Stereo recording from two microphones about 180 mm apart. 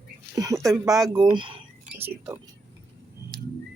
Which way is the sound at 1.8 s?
10° right (ahead or behind).